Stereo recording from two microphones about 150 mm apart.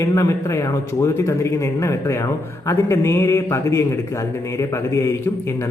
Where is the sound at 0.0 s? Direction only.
20° left (ahead or behind).